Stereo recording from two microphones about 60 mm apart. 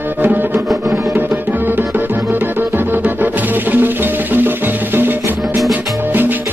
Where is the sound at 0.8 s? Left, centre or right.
Right.